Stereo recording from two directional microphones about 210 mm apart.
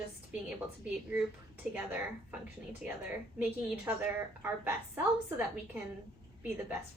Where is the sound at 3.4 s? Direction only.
5° right (ahead or behind).